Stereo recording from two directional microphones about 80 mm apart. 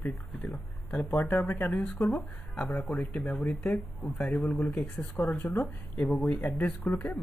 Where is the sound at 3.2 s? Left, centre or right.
Centre.